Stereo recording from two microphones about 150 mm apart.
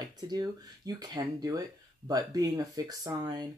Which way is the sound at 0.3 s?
25° right (ahead or behind).